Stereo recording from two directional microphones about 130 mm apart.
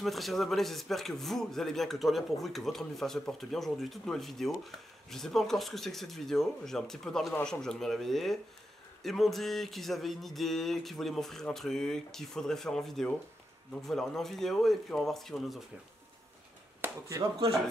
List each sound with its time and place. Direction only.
0.0 s speech: centre (ahead or behind)
16.8 s speech: 15° right (ahead or behind)